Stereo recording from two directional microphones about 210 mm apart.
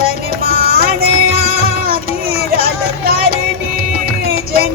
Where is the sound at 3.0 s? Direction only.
45° right (ahead or behind).